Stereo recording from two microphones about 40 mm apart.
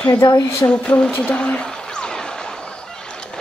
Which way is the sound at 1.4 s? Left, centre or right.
Left.